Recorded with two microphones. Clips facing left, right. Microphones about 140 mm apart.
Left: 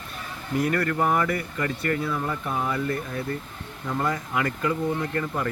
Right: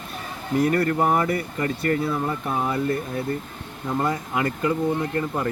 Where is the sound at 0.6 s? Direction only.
35° right (ahead or behind).